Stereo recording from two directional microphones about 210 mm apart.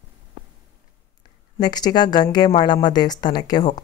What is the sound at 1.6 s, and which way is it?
A woman's voice, 20° left (ahead or behind).